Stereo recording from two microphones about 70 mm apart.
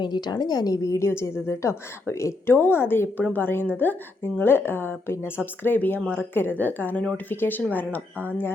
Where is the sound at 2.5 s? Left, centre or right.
Left.